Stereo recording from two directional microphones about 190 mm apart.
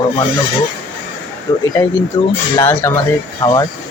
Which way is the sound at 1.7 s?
15° left (ahead or behind).